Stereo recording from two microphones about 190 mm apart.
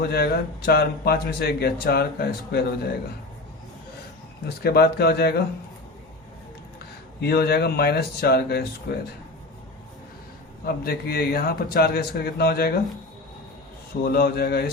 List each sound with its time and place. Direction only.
0.0 s speech: 55° left (ahead or behind)
4.4 s speech: 55° left (ahead or behind)
7.2 s speech: 55° left (ahead or behind)
10.7 s speech: 55° left (ahead or behind)
14.0 s speech: 50° left (ahead or behind)